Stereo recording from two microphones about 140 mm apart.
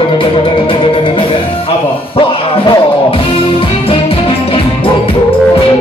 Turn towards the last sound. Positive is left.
turn(degrees=40)  # may be behind; listen again after turning